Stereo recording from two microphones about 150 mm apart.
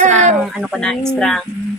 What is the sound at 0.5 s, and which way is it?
Speech, centre (ahead or behind).